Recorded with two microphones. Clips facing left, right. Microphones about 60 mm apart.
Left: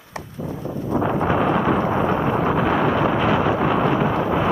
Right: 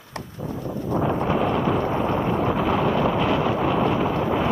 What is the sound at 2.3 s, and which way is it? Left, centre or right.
Wind noise, left.